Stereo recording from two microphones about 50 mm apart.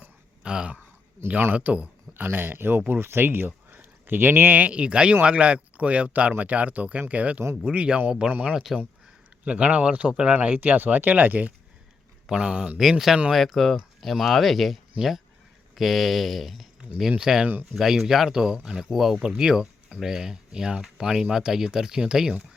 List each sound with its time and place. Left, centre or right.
0.4 s speech: centre
1.2 s speech: right
1.5 s speech: right
2.1 s speech: right
4.6 s speech: right
8.5 s speech: centre
9.4 s speech: right
10.3 s speech: right
12.3 s speech: centre
12.8 s speech: centre
17.1 s speech: centre
19.2 s speech: centre